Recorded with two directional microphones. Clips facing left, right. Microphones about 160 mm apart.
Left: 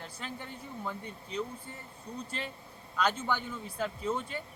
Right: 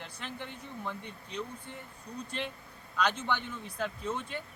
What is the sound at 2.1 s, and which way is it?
Speech, 30° left (ahead or behind).